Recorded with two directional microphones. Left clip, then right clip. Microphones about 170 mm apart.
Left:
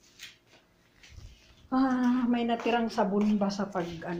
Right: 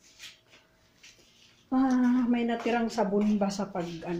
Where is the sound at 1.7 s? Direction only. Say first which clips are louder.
Right 1 dB; 10° right (ahead or behind); by 3.6 s 35° right (ahead or behind).